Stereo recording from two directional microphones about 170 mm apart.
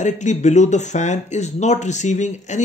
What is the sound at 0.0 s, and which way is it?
Speech, 45° left (ahead or behind).